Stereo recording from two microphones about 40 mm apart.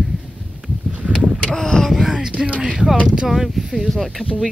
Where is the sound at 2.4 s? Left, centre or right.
Right.